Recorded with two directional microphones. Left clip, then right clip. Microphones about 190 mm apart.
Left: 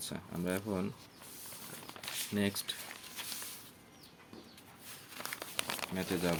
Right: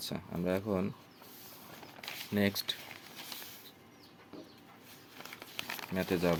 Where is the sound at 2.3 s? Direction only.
25° right (ahead or behind).